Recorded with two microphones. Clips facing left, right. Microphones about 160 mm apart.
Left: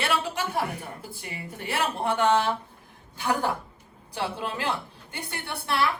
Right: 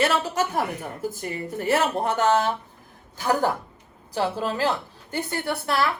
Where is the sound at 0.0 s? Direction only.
45° right (ahead or behind).